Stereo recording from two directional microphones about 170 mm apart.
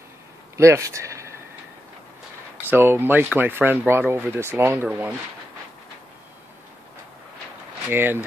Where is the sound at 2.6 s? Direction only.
10° right (ahead or behind).